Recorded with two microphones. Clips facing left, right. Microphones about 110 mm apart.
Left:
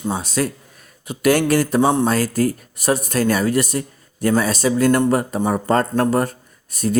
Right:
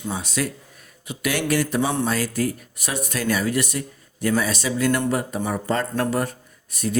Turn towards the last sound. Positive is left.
turn(degrees=40)  # may be behind; listen again after turning